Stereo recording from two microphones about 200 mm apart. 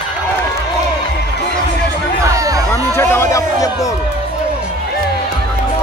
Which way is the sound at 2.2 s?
15° right (ahead or behind).